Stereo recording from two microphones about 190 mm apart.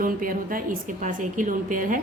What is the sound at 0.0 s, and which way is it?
A woman's voice, 45° right (ahead or behind).